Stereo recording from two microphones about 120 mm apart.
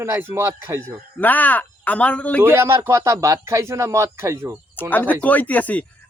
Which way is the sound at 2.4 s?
20° right (ahead or behind).